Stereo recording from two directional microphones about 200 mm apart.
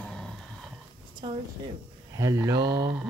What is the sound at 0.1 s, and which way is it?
Dog, 5° left (ahead or behind).